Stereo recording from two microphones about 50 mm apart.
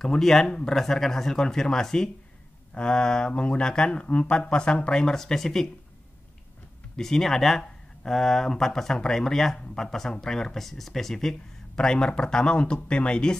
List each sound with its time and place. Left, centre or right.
0.0 s speech: centre
0.7 s speech: centre
7.0 s speech: centre